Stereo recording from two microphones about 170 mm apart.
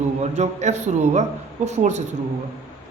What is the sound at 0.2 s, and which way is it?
A man's voice, 40° right (ahead or behind).